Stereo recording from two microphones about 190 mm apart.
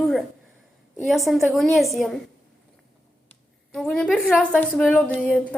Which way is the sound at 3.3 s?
5° left (ahead or behind).